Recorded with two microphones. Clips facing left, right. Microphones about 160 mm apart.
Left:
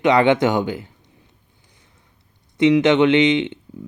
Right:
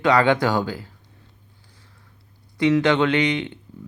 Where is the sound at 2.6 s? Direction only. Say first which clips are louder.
Left 4 dB; 20° left (ahead or behind).